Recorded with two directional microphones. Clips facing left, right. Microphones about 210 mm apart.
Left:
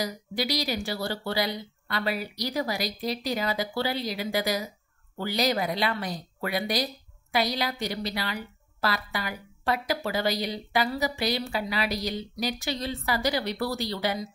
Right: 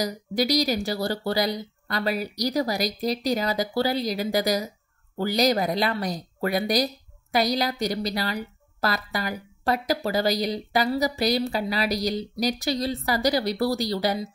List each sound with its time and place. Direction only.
0.0 s a woman's voice: 40° right (ahead or behind)